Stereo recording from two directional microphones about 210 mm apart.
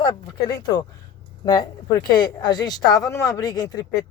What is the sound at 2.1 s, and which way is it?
Speech, 20° left (ahead or behind).